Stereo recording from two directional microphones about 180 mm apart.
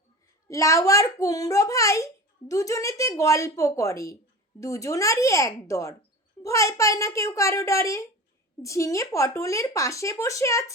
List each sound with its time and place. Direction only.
0.4 s a child's voice: 15° left (ahead or behind)